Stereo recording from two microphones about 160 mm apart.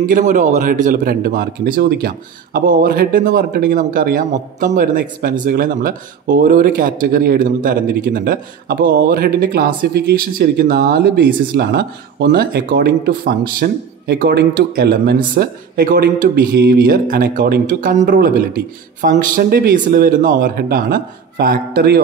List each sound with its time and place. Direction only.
0.0 s speech: 55° right (ahead or behind); by 13.4 s 70° right (ahead or behind)
13.6 s speech: 90° right